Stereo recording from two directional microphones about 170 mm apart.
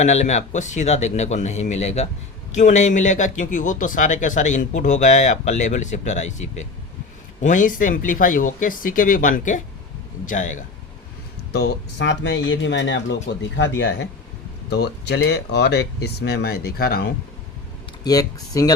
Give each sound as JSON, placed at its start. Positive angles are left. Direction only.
{"t": 0.0, "sound": "a man's voice", "side_deg": 40}
{"t": 11.5, "sound": "speech", "side_deg": 90}
{"t": 18.0, "sound": "speech", "side_deg": 20}